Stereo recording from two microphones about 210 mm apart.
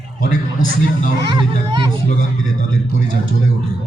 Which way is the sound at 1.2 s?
20° right (ahead or behind).